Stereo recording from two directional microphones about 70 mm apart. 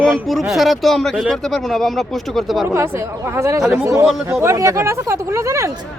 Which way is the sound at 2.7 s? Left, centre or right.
Right.